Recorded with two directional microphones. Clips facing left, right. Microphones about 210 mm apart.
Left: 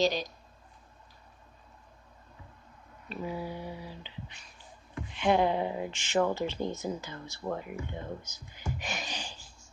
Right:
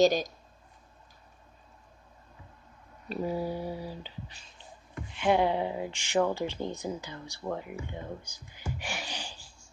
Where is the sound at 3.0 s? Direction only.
40° right (ahead or behind).